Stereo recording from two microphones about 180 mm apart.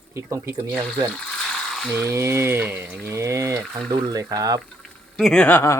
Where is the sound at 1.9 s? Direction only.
15° right (ahead or behind).